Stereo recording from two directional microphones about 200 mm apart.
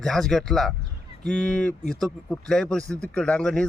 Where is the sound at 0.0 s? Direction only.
Centre (ahead or behind).